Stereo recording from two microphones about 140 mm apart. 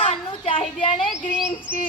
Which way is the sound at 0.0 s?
45° left (ahead or behind).